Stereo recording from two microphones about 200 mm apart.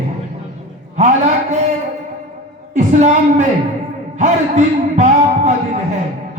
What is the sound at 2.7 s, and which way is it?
A woman's voice, 35° right (ahead or behind).